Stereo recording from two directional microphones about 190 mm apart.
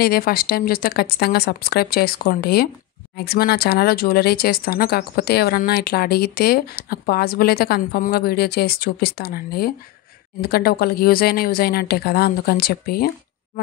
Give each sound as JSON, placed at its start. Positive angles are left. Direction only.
{"t": 0.0, "sound": "speech", "side_deg": 50}